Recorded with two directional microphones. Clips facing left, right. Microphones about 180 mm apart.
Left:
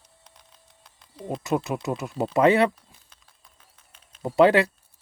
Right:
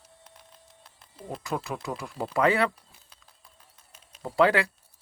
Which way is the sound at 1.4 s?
20° left (ahead or behind).